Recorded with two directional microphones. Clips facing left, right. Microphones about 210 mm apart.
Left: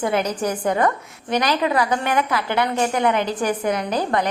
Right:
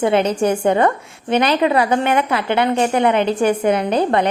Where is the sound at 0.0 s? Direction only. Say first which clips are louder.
Right 6 dB; 25° right (ahead or behind).